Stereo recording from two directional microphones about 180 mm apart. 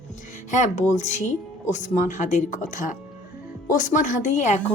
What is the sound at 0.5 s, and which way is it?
A woman's voice, 40° left (ahead or behind).